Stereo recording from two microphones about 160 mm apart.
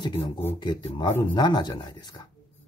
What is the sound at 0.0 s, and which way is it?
Speech, 35° left (ahead or behind).